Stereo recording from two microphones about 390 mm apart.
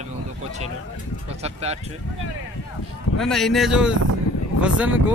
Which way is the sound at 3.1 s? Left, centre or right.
Centre.